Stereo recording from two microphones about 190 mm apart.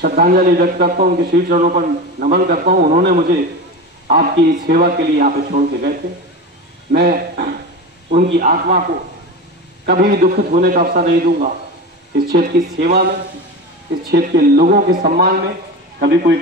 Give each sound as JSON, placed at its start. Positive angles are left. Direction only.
{"t": 0.0, "sound": "a man's voice", "side_deg": -50}
{"t": 9.8, "sound": "a man's voice", "side_deg": -50}
{"t": 14.1, "sound": "a man's voice", "side_deg": -55}